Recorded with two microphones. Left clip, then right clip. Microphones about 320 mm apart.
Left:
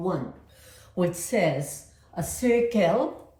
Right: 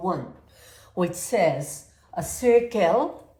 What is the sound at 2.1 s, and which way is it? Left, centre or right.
Speech, right.